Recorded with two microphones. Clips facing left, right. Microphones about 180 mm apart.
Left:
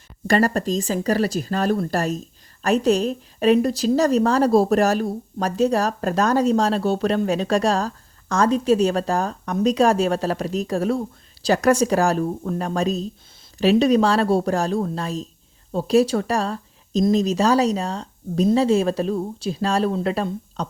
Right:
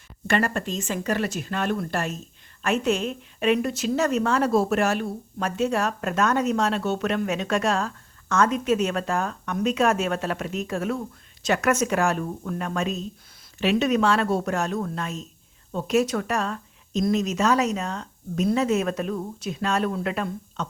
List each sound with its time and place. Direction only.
0.3 s speech: 35° left (ahead or behind)